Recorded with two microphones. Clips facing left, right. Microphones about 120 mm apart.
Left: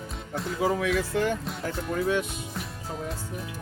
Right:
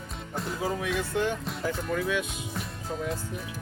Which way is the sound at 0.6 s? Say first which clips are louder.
Left 6 dB; 75° left (ahead or behind).